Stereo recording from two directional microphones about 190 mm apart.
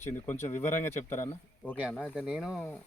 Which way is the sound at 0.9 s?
15° left (ahead or behind).